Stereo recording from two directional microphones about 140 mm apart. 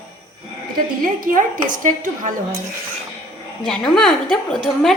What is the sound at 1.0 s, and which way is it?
Speech, 75° right (ahead or behind).